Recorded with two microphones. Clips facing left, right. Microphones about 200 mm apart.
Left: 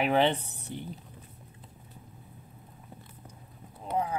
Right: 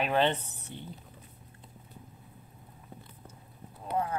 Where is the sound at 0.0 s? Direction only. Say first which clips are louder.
Left 2 dB; 10° left (ahead or behind).